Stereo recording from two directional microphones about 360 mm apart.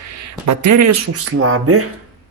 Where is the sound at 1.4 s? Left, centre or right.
Right.